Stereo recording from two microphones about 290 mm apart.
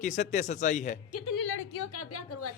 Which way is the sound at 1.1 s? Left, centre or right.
Left.